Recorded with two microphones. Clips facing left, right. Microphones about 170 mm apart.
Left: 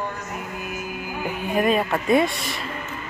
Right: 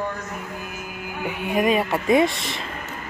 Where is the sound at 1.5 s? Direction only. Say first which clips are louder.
Even; 10° right (ahead or behind).